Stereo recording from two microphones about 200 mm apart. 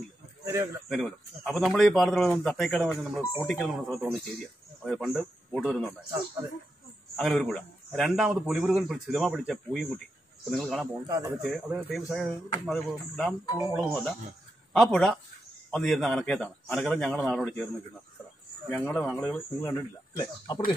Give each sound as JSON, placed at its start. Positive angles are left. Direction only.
{"t": 0.8, "sound": "a man's voice", "side_deg": 0}
{"t": 7.2, "sound": "speech", "side_deg": 0}
{"t": 11.1, "sound": "speech", "side_deg": -15}
{"t": 11.4, "sound": "speech", "side_deg": 0}
{"t": 18.7, "sound": "speech", "side_deg": 10}